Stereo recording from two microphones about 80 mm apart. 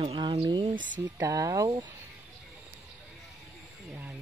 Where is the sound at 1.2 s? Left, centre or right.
Right.